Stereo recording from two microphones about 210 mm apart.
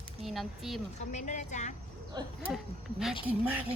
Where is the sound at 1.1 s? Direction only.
35° left (ahead or behind).